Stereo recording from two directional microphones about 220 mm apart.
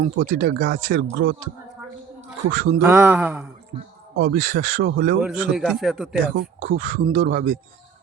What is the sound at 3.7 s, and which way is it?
Speech, 25° right (ahead or behind).